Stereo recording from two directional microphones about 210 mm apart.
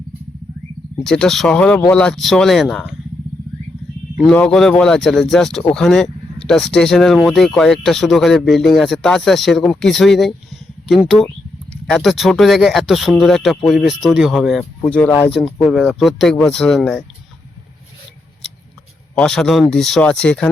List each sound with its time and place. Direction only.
1.0 s speech: 5° left (ahead or behind)
4.3 s speech: 5° left (ahead or behind)
19.1 s speech: centre (ahead or behind)